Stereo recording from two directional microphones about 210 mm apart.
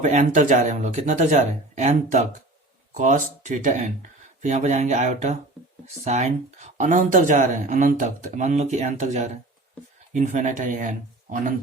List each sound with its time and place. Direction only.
0.0 s speech: 35° right (ahead or behind)